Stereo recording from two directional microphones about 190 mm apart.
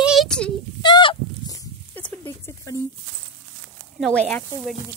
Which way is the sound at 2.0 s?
10° left (ahead or behind).